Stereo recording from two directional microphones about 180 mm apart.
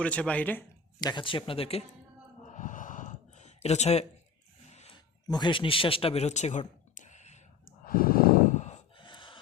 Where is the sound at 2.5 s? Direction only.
45° left (ahead or behind).